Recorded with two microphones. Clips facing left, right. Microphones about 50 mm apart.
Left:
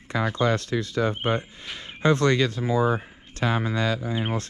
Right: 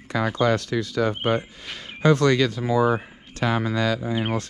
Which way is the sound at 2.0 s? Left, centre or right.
Left.